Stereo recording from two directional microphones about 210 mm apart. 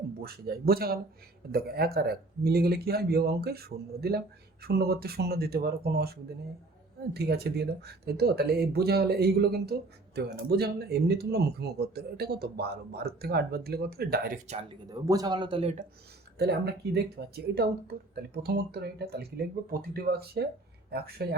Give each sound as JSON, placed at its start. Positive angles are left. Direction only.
{"t": 0.2, "sound": "speech", "side_deg": -45}
{"t": 14.8, "sound": "speech", "side_deg": -20}
{"t": 16.4, "sound": "speech", "side_deg": -50}